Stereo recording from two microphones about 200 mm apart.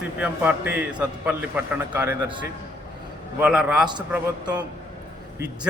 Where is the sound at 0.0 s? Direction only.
5° right (ahead or behind).